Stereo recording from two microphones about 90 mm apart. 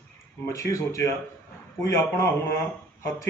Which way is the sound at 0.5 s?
35° left (ahead or behind).